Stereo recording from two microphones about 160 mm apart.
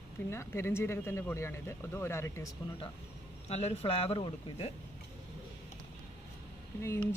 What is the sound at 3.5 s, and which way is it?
Speech, 40° left (ahead or behind).